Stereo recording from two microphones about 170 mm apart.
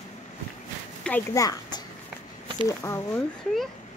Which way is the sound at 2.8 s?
15° left (ahead or behind).